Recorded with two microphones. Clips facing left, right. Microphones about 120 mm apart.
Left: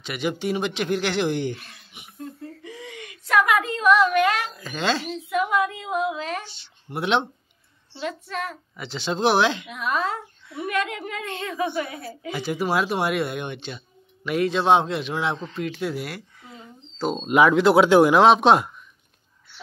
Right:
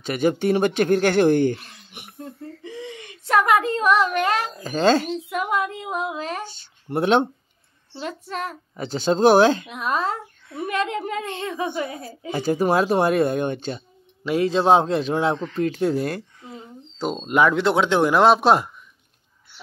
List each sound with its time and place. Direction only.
0.0 s speech: 45° right (ahead or behind)
1.9 s a sound: 60° right (ahead or behind)
2.6 s a woman's voice: 25° right (ahead or behind)
12.2 s a child's voice: 40° right (ahead or behind)
15.3 s speech: 15° left (ahead or behind)
16.0 s speech: 45° right (ahead or behind)
17.0 s speech: 5° right (ahead or behind)